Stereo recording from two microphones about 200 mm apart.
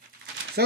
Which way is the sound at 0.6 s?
55° right (ahead or behind).